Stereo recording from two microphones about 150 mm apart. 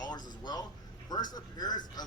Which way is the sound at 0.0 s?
25° left (ahead or behind).